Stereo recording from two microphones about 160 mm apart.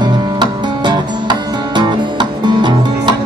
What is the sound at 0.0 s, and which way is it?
Music, 25° right (ahead or behind).